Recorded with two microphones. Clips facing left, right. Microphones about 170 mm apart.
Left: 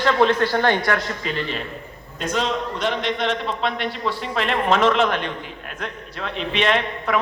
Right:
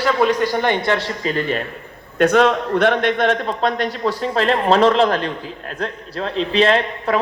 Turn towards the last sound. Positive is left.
turn(degrees=-35)  # may be behind; listen again after turning